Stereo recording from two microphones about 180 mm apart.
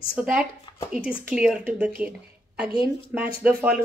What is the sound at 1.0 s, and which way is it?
A woman's voice, 5° right (ahead or behind).